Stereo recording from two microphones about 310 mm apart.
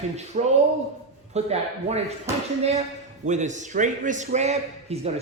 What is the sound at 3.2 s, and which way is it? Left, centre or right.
A man's voice, right.